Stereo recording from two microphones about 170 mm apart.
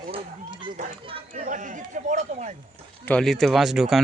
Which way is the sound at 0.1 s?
30° right (ahead or behind).